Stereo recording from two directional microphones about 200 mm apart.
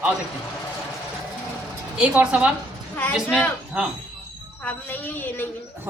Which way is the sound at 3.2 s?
10° left (ahead or behind).